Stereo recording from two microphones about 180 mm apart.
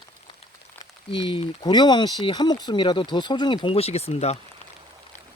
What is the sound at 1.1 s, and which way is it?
Speech, 30° left (ahead or behind).